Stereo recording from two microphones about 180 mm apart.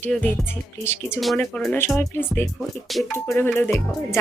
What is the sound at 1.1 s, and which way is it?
Speech, centre (ahead or behind).